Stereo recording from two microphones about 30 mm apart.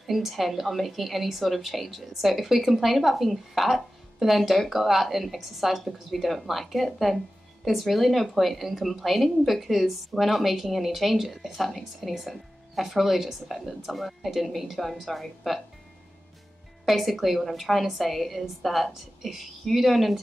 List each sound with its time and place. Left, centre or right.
0.0 s a woman's voice: centre
16.8 s a woman's voice: centre